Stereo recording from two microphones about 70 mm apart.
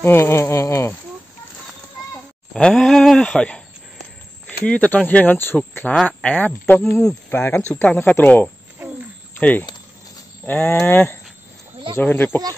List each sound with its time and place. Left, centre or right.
0.0 s speech: left
2.5 s a sound: centre
4.5 s speech: centre